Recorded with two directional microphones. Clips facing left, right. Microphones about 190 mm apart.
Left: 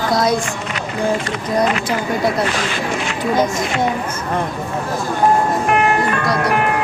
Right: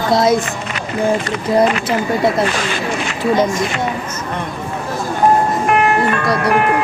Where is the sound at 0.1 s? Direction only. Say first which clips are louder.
Right 4 dB; 25° right (ahead or behind).